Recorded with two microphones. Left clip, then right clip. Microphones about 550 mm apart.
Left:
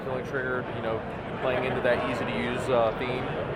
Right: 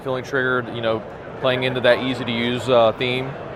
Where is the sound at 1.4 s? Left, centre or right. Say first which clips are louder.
Right 8 dB; right.